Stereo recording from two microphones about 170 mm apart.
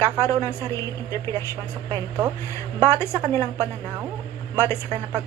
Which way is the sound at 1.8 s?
25° right (ahead or behind).